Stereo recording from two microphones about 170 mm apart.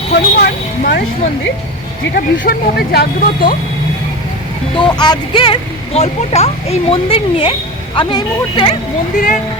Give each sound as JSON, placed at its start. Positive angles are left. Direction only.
{"t": 0.1, "sound": "speech", "side_deg": 70}
{"t": 2.1, "sound": "speech", "side_deg": 60}
{"t": 4.8, "sound": "speech", "side_deg": 25}
{"t": 9.1, "sound": "speech", "side_deg": 50}